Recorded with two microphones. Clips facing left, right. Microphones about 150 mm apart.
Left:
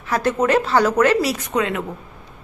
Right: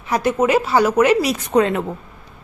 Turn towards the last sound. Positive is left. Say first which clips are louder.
# right 5 dB
turn(degrees=-35)  # may be behind; listen again after turning